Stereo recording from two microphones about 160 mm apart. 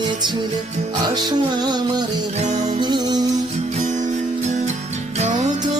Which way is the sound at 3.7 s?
50° right (ahead or behind).